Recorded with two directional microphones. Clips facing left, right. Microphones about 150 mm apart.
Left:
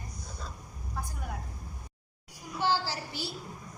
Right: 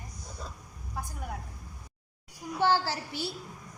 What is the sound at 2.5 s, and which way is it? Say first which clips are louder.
Speech: right 3 dB; 55° right (ahead or behind).